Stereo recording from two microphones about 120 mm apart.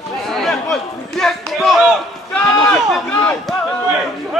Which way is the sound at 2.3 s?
10° left (ahead or behind).